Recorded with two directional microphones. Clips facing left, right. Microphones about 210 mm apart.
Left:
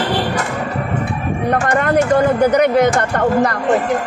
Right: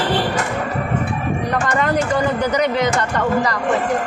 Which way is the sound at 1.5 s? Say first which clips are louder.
Left 5 dB; 55° left (ahead or behind).